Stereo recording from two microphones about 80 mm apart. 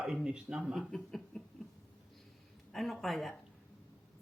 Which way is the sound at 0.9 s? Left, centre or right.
Centre.